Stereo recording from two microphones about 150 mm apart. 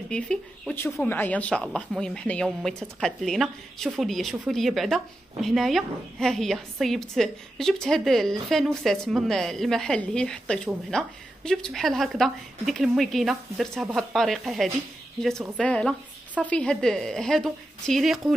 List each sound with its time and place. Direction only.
0.1 s speech: 5° left (ahead or behind)